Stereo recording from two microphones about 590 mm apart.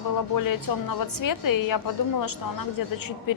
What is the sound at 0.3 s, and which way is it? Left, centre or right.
A woman's voice, left.